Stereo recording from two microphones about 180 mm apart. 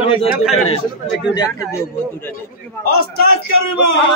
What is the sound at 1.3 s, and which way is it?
A man's voice, 20° left (ahead or behind).